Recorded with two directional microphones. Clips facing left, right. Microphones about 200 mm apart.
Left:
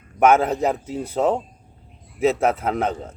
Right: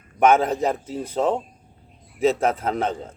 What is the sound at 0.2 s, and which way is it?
Speech, 10° left (ahead or behind).